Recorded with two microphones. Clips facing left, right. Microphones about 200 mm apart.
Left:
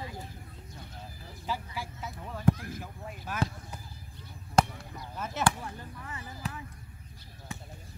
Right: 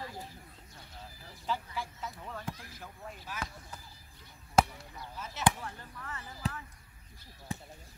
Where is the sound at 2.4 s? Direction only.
55° left (ahead or behind).